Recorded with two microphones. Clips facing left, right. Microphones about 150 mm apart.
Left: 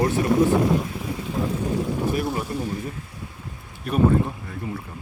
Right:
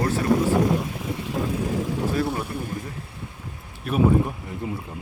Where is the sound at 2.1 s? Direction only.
15° left (ahead or behind).